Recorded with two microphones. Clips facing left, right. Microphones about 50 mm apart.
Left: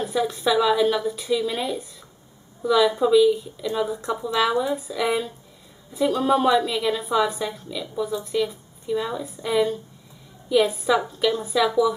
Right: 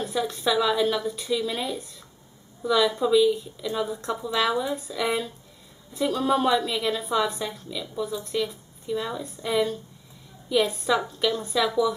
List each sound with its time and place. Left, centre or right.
0.0 s speech: centre